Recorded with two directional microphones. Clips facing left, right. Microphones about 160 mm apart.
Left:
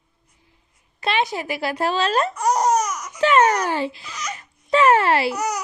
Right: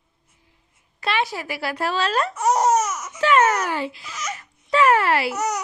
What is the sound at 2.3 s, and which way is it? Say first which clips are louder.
Laughter: right 3 dB; 5° right (ahead or behind).